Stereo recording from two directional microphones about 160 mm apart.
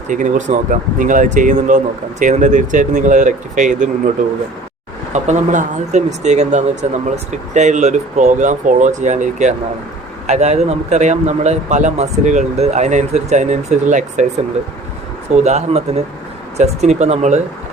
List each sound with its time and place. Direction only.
0.1 s speech: 55° right (ahead or behind)
5.1 s speech: 45° right (ahead or behind)
15.4 s speech: 45° right (ahead or behind)